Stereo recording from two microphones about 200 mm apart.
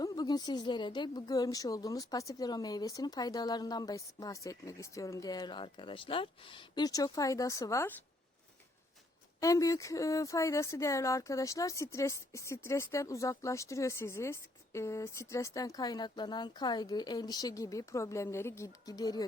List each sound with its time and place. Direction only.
0.0 s a woman's voice: 20° left (ahead or behind)
9.4 s speech: 15° left (ahead or behind)